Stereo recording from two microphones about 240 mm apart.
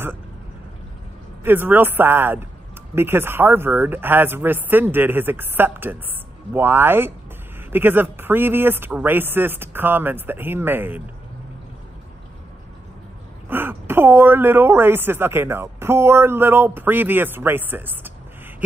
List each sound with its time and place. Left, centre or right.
1.4 s a woman's voice: centre
13.5 s a woman's voice: centre